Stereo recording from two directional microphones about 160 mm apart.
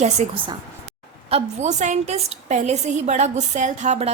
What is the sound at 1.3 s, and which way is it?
A woman's voice, 45° right (ahead or behind).